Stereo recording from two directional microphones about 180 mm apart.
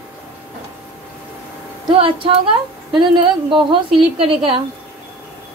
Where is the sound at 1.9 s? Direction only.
30° right (ahead or behind).